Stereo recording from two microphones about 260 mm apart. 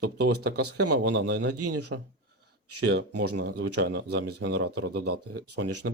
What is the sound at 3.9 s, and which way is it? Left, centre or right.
Speech, right.